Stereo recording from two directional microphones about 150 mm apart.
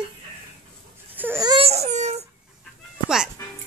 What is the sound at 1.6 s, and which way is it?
Baby cry, 45° right (ahead or behind).